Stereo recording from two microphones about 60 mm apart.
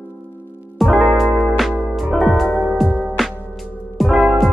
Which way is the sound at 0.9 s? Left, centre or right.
Centre.